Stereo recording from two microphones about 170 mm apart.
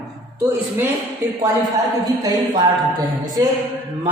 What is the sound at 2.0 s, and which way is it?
Speech, 25° right (ahead or behind).